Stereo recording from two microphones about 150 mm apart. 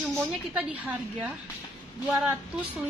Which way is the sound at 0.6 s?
10° right (ahead or behind).